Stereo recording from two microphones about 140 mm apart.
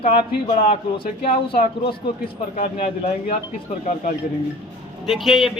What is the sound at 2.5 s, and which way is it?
Speech, 90° left.